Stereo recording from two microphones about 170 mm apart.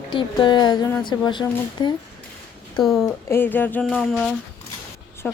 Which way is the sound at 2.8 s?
Centre (ahead or behind).